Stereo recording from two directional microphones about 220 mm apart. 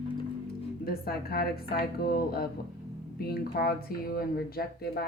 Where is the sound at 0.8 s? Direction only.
45° left (ahead or behind).